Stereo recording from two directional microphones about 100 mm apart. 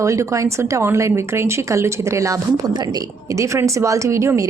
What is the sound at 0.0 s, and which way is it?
Speech, 30° right (ahead or behind).